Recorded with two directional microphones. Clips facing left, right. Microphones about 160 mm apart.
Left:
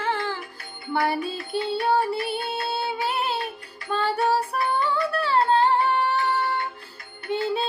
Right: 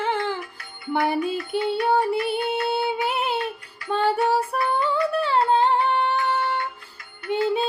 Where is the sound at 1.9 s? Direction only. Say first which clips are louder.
Right 1 dB; 20° right (ahead or behind).